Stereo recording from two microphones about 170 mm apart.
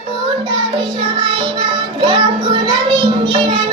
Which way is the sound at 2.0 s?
30° right (ahead or behind).